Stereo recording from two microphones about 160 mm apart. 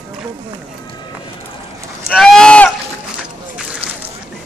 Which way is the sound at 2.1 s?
5° left (ahead or behind).